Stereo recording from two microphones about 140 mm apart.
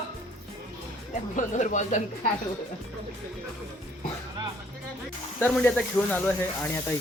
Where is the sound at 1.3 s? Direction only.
60° left (ahead or behind).